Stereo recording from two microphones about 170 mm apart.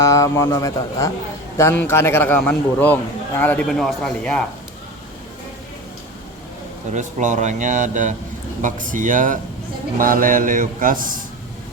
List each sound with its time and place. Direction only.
0.0 s a man's voice: 20° left (ahead or behind); by 4.4 s 5° left (ahead or behind)
6.9 s mantra: 45° right (ahead or behind)